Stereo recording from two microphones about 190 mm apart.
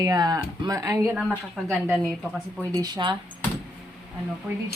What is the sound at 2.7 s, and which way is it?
Speech, 20° right (ahead or behind).